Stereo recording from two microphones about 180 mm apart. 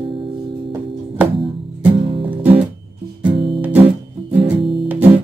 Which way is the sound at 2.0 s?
30° right (ahead or behind).